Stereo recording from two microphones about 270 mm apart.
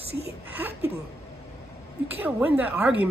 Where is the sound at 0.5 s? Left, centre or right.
Centre.